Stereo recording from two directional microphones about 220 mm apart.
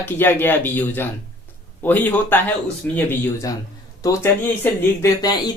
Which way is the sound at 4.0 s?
10° left (ahead or behind).